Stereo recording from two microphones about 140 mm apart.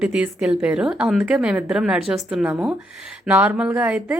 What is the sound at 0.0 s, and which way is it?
A woman's voice, 5° right (ahead or behind).